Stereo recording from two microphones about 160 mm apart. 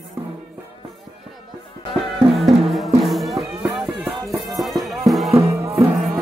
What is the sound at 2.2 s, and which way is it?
Music, centre (ahead or behind).